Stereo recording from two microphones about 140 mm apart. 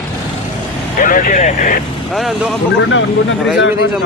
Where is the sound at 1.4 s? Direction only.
55° left (ahead or behind).